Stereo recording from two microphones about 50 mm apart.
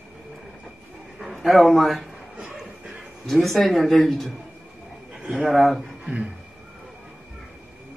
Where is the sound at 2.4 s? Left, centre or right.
Centre.